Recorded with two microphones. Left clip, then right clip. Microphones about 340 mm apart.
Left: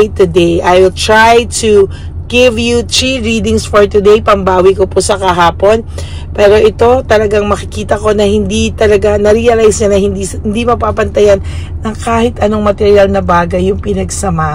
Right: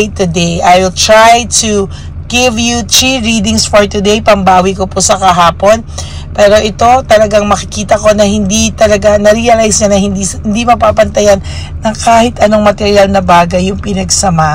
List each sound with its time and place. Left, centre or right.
0.0 s speech: centre